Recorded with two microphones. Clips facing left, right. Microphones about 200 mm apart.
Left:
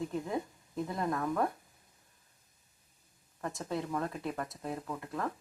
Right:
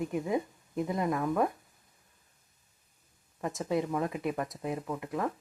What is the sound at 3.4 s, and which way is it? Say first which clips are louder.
Speech: right 6 dB; 20° right (ahead or behind).